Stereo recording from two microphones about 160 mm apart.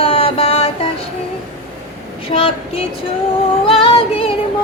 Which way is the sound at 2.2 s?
35° left (ahead or behind).